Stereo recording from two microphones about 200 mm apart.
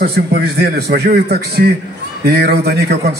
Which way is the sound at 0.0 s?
50° right (ahead or behind).